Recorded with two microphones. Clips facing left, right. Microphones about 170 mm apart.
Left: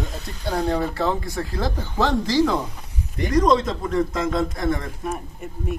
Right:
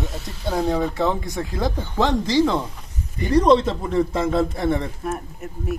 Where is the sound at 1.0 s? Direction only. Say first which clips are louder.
Right 1 dB; 20° right (ahead or behind).